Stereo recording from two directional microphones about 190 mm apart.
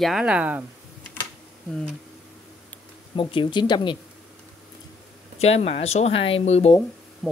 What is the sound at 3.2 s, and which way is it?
Speech, 25° left (ahead or behind).